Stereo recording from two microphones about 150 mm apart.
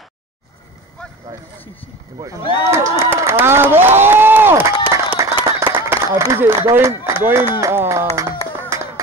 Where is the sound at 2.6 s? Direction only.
20° right (ahead or behind).